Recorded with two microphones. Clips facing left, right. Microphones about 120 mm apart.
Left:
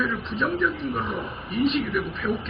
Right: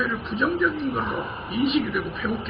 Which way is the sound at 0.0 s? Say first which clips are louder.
Right 1 dB; 15° right (ahead or behind).